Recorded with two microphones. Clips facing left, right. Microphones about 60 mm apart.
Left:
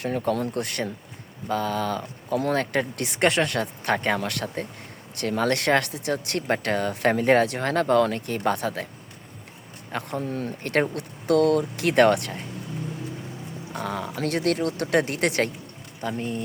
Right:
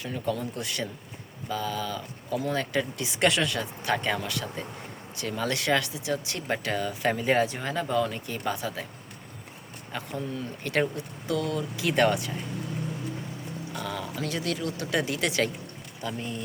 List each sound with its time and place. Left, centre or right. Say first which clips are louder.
0.0 s speech: left 6 dB; left
3.2 s speech: left 3 dB; left
9.9 s speech: left 5 dB; left
13.7 s speech: left 5 dB; left